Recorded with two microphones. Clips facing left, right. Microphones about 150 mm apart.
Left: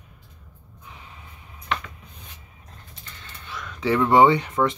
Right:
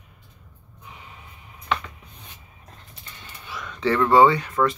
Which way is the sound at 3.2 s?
5° right (ahead or behind).